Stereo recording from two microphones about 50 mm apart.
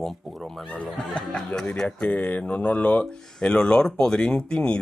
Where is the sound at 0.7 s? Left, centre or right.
Left.